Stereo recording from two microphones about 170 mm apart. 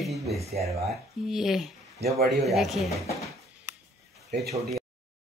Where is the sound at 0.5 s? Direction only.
40° right (ahead or behind).